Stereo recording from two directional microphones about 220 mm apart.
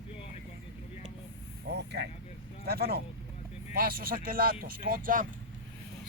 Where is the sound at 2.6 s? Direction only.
45° right (ahead or behind).